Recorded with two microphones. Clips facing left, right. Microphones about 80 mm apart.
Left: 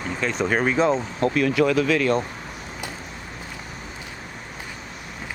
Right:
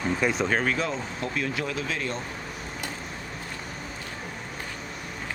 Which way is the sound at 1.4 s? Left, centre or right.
Left.